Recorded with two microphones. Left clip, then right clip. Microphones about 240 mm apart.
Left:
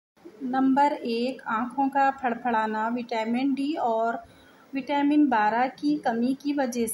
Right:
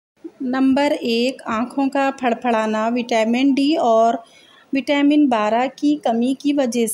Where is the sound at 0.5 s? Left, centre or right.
Right.